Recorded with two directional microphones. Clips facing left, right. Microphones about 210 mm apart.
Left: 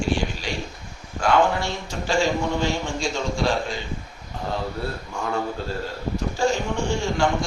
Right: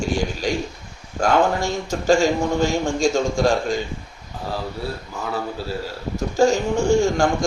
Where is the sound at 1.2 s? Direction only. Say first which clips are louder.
Right 2 dB; 45° right (ahead or behind).